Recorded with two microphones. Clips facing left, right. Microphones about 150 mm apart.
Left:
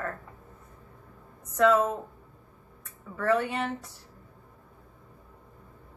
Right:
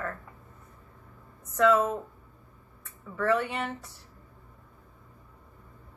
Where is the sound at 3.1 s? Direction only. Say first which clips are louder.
Left 1 dB; 35° left (ahead or behind).